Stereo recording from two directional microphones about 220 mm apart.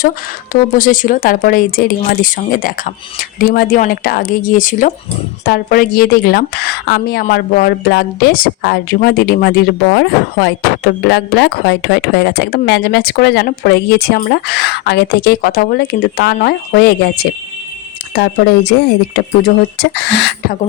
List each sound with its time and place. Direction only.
0.5 s a woman's voice: 35° left (ahead or behind); by 20.6 s 55° left (ahead or behind)